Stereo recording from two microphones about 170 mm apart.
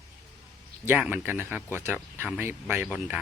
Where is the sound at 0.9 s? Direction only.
Centre (ahead or behind).